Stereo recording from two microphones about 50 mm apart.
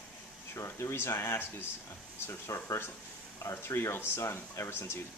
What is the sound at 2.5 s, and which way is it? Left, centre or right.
Speech, left.